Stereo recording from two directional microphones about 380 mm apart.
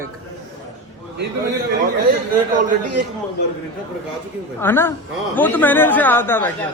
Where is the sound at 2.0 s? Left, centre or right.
Right.